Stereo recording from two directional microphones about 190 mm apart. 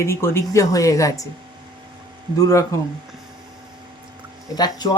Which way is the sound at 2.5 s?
15° left (ahead or behind).